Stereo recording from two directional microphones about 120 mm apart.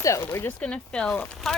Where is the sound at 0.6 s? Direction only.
10° left (ahead or behind).